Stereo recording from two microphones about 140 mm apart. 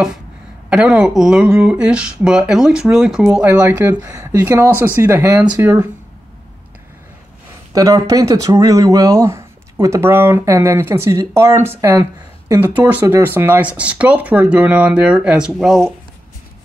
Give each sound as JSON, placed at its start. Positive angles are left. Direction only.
{"t": 0.7, "sound": "speech", "side_deg": -5}
{"t": 3.4, "sound": "speech", "side_deg": -20}
{"t": 7.7, "sound": "speech", "side_deg": -25}